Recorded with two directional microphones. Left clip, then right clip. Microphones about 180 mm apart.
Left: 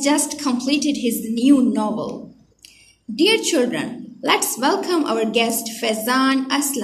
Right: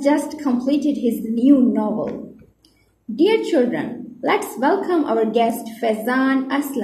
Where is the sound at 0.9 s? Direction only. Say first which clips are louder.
Right 1 dB; 40° left (ahead or behind).